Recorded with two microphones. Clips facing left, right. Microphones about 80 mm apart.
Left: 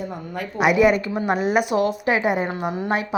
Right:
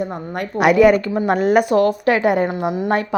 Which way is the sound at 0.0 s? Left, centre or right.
Right.